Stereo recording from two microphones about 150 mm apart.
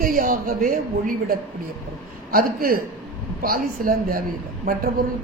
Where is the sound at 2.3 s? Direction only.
70° right (ahead or behind).